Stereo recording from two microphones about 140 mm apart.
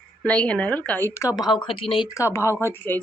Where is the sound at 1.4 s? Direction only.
35° left (ahead or behind).